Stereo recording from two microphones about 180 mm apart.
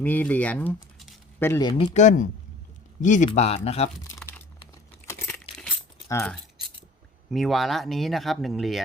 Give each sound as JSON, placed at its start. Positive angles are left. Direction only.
{"t": 0.0, "sound": "speech", "side_deg": 10}
{"t": 1.9, "sound": "speech", "side_deg": 40}
{"t": 4.1, "sound": "crumpling", "side_deg": 10}
{"t": 5.3, "sound": "a sound", "side_deg": 5}
{"t": 6.1, "sound": "speech", "side_deg": 15}
{"t": 7.3, "sound": "speech", "side_deg": 0}